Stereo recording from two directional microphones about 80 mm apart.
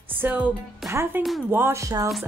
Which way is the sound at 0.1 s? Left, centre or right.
Right.